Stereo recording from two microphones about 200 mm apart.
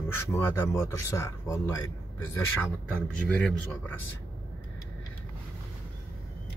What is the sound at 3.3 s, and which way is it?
Speech, 5° left (ahead or behind).